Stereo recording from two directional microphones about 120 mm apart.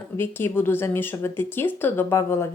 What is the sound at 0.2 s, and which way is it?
Speech, 20° left (ahead or behind).